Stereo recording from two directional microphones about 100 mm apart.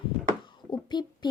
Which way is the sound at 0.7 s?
45° left (ahead or behind).